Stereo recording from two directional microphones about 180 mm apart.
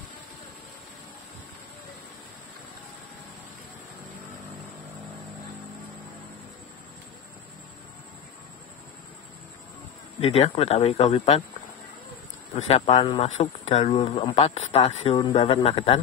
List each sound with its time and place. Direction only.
10.2 s speech: 35° left (ahead or behind)
12.5 s speech: 35° left (ahead or behind)